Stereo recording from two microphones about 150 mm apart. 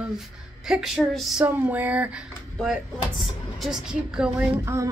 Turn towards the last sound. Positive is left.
turn(degrees=-20)  # may be behind; listen again after turning